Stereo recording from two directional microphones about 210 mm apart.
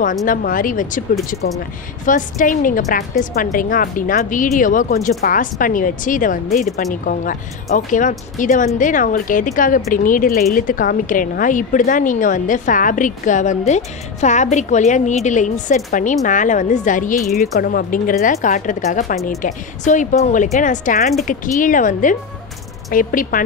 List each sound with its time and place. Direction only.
0.0 s speech: 40° left (ahead or behind)
2.0 s speech: 40° left (ahead or behind)